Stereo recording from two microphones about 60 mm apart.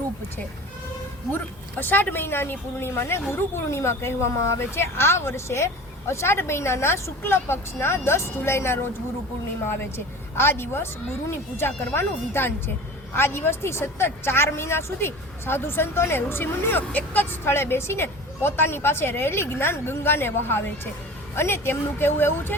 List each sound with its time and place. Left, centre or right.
1.8 s a woman's voice: left
10.3 s a woman's voice: left